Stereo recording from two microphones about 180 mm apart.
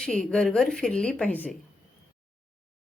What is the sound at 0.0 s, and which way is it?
Speech, 5° left (ahead or behind).